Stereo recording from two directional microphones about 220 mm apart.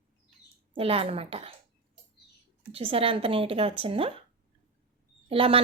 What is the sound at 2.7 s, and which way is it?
A woman's voice, 25° right (ahead or behind).